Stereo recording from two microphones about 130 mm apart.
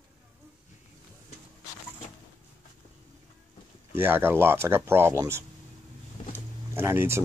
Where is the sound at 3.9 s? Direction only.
15° right (ahead or behind).